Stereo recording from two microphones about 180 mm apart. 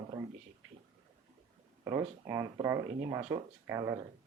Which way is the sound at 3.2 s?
30° right (ahead or behind).